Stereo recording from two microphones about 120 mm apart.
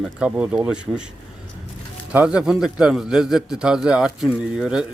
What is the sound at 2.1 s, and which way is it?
A man's voice, 10° right (ahead or behind).